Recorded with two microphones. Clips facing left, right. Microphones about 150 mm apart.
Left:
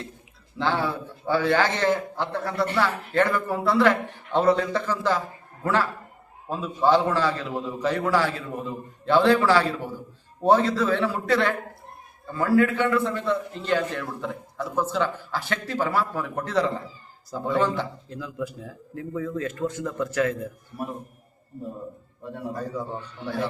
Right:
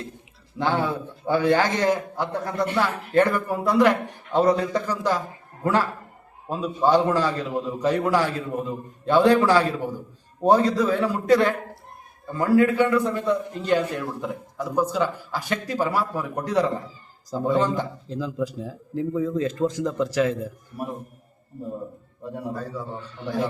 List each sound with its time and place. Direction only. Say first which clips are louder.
0.6 s a man's voice: right 2 dB; 20° right (ahead or behind)
6.5 s a man's voice: right 1 dB; 15° right (ahead or behind)
22.5 s a man's voice: left 1 dB; 15° left (ahead or behind)
23.2 s a man's voice: right 3 dB; 15° right (ahead or behind)